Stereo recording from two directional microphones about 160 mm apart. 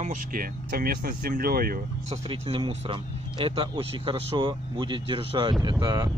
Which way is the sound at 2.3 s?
35° right (ahead or behind).